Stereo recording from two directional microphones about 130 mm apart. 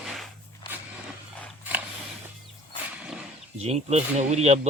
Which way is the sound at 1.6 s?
15° right (ahead or behind).